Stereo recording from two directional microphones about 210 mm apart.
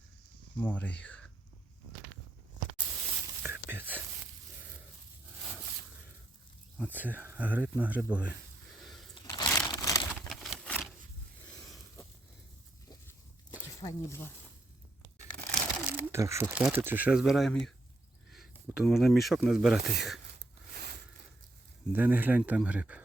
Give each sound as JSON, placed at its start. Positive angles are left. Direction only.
{"t": 0.6, "sound": "speech", "side_deg": 10}
{"t": 3.4, "sound": "a sound", "side_deg": -10}
{"t": 6.7, "sound": "speech", "side_deg": -10}
{"t": 9.1, "sound": "crumpling", "side_deg": 20}
{"t": 10.2, "sound": "a sound", "side_deg": 0}
{"t": 13.7, "sound": "speech", "side_deg": 15}
{"t": 15.5, "sound": "speech", "side_deg": -5}
{"t": 18.9, "sound": "speech", "side_deg": 0}
{"t": 21.9, "sound": "speech", "side_deg": -10}